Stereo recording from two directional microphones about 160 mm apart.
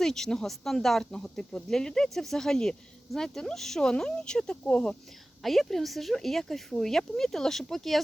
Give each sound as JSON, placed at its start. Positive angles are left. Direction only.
{"t": 0.0, "sound": "speech", "side_deg": 5}